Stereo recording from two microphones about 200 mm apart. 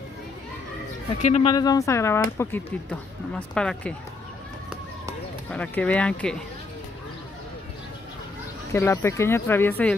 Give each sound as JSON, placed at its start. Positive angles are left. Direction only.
{"t": 1.2, "sound": "speech", "side_deg": 30}
{"t": 1.5, "sound": "speech", "side_deg": 20}
{"t": 5.5, "sound": "speech", "side_deg": 5}
{"t": 8.7, "sound": "speech", "side_deg": 15}